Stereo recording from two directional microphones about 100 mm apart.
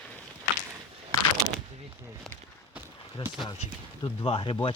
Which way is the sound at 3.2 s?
65° left (ahead or behind).